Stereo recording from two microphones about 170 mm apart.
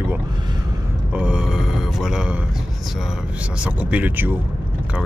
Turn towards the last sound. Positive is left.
turn(degrees=-10)  # may be behind; listen again after turning